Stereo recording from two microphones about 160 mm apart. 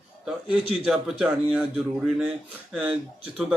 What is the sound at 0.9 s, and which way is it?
Speech, centre (ahead or behind).